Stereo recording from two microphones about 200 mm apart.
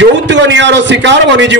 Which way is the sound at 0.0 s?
65° right (ahead or behind).